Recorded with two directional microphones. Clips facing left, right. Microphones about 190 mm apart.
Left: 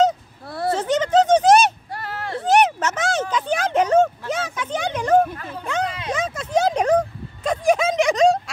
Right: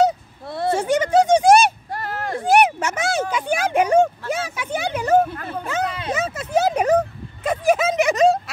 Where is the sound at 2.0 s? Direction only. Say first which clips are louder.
Right 2 dB; 45° right (ahead or behind).